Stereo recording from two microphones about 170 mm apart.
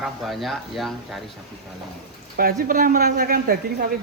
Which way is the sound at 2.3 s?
60° right (ahead or behind).